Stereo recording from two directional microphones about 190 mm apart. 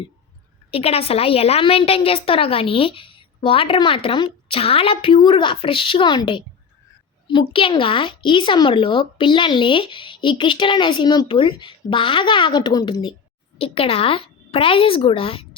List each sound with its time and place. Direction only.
0.7 s speech: 30° left (ahead or behind)